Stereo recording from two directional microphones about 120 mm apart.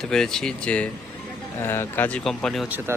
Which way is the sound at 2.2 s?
5° left (ahead or behind).